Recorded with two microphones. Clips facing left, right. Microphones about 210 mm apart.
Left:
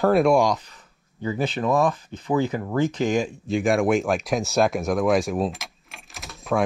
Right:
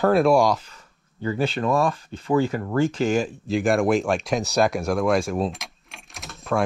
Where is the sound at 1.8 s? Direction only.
15° left (ahead or behind).